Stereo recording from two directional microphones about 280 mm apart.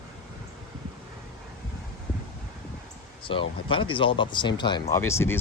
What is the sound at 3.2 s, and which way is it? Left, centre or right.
Speech, centre.